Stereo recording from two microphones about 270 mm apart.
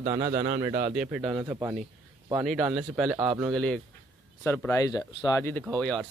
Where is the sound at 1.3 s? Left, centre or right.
Centre.